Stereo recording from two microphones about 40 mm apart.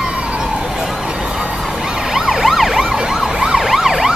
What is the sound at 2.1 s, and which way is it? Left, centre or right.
Emergency vehicle, centre.